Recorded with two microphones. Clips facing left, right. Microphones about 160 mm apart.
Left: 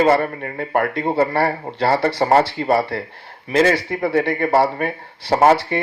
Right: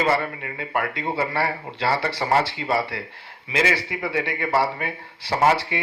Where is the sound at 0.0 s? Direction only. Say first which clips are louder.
Left 7 dB; 50° left (ahead or behind).